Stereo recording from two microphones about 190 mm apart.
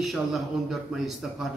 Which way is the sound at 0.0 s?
Centre (ahead or behind).